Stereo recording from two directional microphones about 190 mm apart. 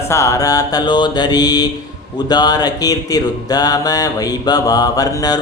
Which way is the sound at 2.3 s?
20° left (ahead or behind).